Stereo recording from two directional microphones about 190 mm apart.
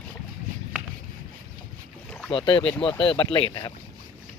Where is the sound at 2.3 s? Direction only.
25° left (ahead or behind).